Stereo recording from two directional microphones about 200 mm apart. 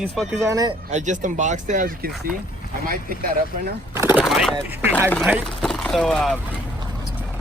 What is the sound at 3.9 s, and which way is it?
Bird, 10° right (ahead or behind).